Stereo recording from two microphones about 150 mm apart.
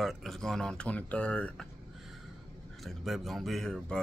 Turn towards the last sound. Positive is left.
turn(degrees=0)  # may be behind; listen again after turning